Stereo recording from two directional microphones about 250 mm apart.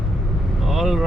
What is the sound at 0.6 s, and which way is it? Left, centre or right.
Vehicle, centre.